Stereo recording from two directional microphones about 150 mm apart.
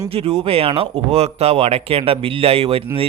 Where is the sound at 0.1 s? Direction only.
40° right (ahead or behind).